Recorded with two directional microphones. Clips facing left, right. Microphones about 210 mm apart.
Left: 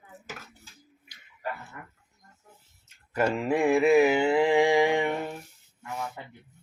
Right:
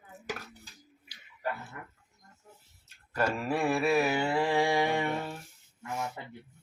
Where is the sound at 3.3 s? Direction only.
15° left (ahead or behind).